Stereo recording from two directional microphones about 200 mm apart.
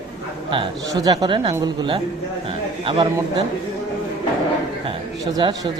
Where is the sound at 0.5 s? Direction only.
20° right (ahead or behind).